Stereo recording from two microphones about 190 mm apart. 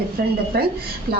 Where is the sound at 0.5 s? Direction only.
55° right (ahead or behind).